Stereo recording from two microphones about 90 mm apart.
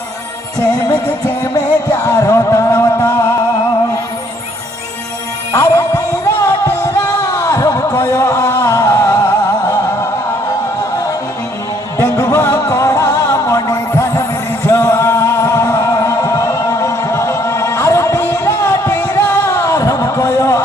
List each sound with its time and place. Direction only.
1.4 s music: 35° left (ahead or behind)
5.5 s music: 35° left (ahead or behind)
7.3 s a sound: 40° left (ahead or behind)
7.9 s music: 30° left (ahead or behind)
8.5 s music: 25° left (ahead or behind)
8.7 s music: 35° left (ahead or behind)
12.0 s music: 30° left (ahead or behind)
19.5 s a sound: 35° left (ahead or behind)